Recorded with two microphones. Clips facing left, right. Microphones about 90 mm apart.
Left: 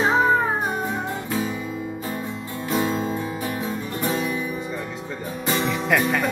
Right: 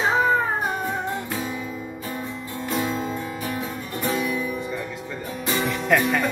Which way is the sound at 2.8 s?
30° left (ahead or behind).